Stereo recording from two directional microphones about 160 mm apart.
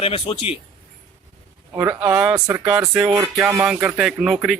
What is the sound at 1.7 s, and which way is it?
Speech, 15° right (ahead or behind).